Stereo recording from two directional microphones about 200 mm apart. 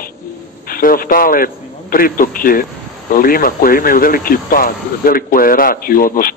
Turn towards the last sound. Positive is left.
turn(degrees=45)  # may be behind; listen again after turning